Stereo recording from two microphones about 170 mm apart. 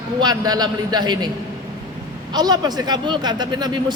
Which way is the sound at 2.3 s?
25° right (ahead or behind).